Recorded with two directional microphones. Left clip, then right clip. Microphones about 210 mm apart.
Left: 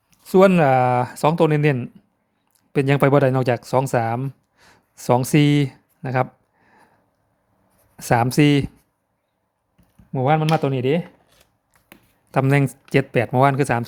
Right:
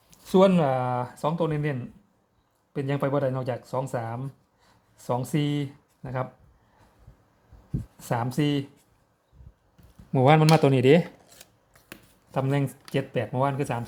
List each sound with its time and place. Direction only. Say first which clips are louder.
0.3 s speech: left 6 dB; 30° left (ahead or behind); by 6.2 s 50° left (ahead or behind)
7.9 s speech: left 11 dB; 45° left (ahead or behind)
10.1 s speech: even; 5° left (ahead or behind)
12.3 s speech: left 8 dB; 40° left (ahead or behind)